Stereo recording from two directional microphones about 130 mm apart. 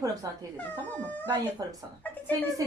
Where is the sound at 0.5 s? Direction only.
15° left (ahead or behind).